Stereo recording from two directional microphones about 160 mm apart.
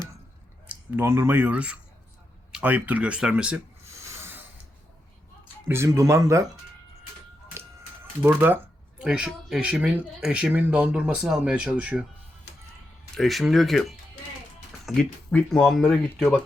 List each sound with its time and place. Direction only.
0.7 s speech: 15° right (ahead or behind)
5.6 s speech: 15° right (ahead or behind)
8.2 s speech: 10° right (ahead or behind)
13.1 s speech: centre (ahead or behind)